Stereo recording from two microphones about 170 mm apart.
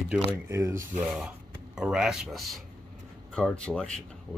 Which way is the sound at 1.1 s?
Centre (ahead or behind).